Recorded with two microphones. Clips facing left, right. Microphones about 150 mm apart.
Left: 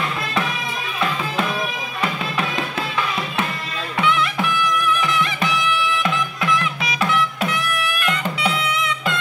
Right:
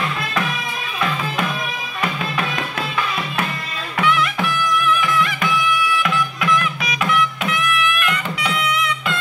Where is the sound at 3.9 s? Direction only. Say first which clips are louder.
Right 1 dB; 25° left (ahead or behind).